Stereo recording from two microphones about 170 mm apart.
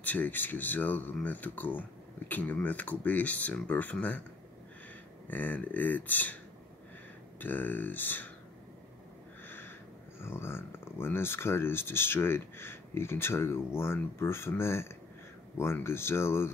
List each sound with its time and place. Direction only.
0.0 s speech: 10° left (ahead or behind)
5.3 s speech: 10° left (ahead or behind)
7.3 s speech: 10° left (ahead or behind)
9.5 s a sound: 15° left (ahead or behind)
10.2 s speech: 15° left (ahead or behind)